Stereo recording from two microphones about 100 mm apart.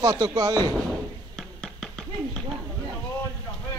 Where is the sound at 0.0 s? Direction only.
40° right (ahead or behind).